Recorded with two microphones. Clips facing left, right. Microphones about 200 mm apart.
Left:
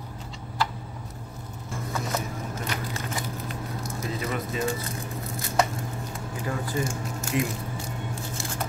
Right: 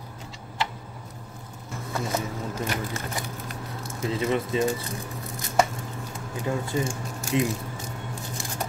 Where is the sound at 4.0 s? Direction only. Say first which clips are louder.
Right 6 dB; 25° right (ahead or behind).